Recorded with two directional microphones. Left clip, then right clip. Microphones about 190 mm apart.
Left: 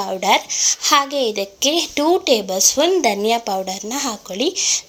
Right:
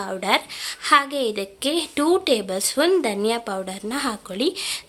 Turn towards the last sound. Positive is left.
turn(degrees=-5)  # may be behind; listen again after turning